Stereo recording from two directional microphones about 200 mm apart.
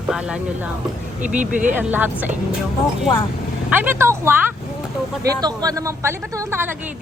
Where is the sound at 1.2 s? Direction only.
40° right (ahead or behind).